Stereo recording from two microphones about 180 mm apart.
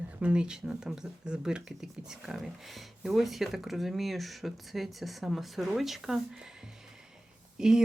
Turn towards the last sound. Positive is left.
turn(degrees=-5)  # may be behind; listen again after turning